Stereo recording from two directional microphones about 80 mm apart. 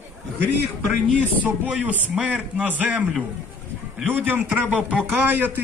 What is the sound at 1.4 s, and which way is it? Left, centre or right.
A man's voice, centre.